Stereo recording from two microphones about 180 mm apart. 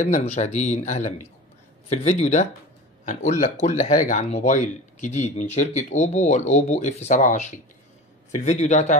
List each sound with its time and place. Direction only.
0.0 s speech: 40° left (ahead or behind)